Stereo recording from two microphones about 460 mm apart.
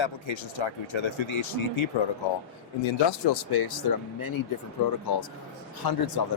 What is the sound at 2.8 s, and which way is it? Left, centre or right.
Speech, left.